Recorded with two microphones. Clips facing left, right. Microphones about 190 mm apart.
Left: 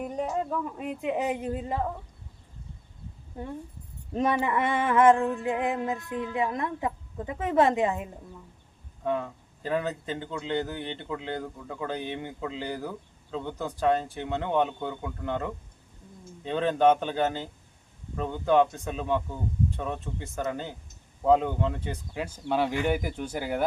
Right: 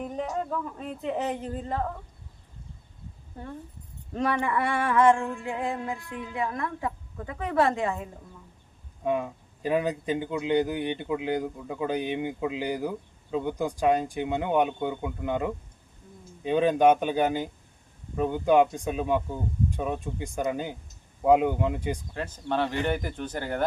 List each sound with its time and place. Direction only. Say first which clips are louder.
0.0 s a woman's voice: left 1 dB; 5° left (ahead or behind)
4.1 s music: left 1 dB; 20° left (ahead or behind)
9.0 s speech: right 2 dB; 15° right (ahead or behind)
22.1 s a woman's voice: left 5 dB; 10° left (ahead or behind)